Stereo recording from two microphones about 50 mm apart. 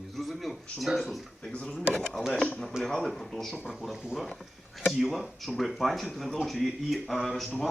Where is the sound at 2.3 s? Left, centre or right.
Left.